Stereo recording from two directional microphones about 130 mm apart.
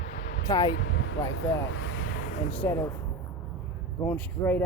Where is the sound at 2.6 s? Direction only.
20° left (ahead or behind).